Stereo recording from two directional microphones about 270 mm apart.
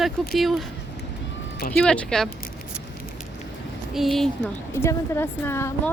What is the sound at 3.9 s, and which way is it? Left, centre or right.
A woman's voice, centre.